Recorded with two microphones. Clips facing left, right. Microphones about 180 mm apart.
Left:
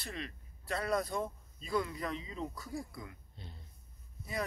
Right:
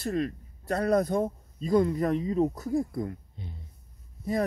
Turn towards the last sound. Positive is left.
turn(degrees=-45)  # may be behind; listen again after turning